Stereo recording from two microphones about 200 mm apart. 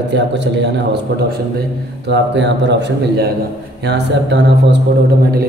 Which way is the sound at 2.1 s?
60° right (ahead or behind).